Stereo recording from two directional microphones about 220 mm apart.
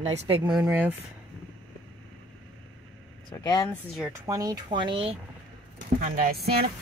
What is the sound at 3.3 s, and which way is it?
Speech, 15° left (ahead or behind).